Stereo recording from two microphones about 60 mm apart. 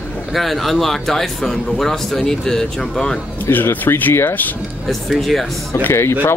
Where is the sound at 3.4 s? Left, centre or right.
Left.